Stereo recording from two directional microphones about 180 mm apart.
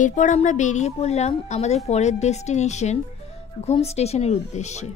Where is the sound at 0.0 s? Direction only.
45° left (ahead or behind).